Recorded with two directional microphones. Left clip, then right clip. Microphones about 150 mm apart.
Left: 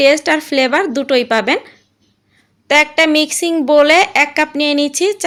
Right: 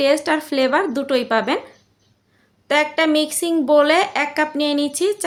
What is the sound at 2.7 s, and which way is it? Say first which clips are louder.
A woman's voice: left 6 dB; 20° left (ahead or behind).